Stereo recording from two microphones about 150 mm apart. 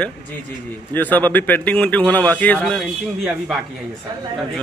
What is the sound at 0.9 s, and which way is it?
A man's voice, 10° left (ahead or behind).